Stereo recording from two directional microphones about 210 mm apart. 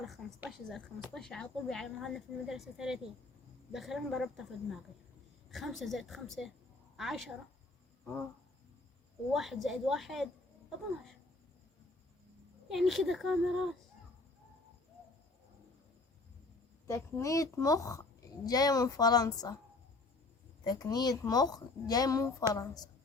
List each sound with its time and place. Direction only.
0.0 s a woman's voice: 5° right (ahead or behind)
9.3 s a woman's voice: centre (ahead or behind)
12.6 s a woman's voice: centre (ahead or behind)
16.8 s a woman's voice: 15° left (ahead or behind)
20.7 s a woman's voice: 20° left (ahead or behind)